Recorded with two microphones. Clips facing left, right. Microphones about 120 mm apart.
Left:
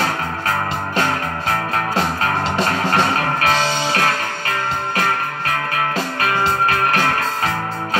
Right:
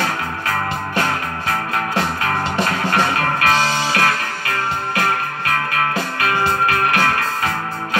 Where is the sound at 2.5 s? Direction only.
30° left (ahead or behind).